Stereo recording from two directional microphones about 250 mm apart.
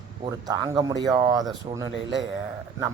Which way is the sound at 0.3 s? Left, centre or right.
Centre.